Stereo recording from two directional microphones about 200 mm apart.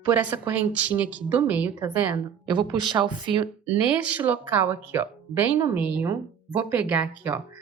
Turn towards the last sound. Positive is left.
turn(degrees=-10)  # may be behind; listen again after turning